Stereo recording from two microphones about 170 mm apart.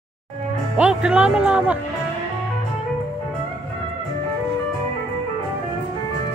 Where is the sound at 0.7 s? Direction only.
5° right (ahead or behind).